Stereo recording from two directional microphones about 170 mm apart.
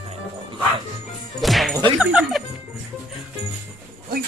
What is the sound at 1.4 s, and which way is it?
Music, centre (ahead or behind).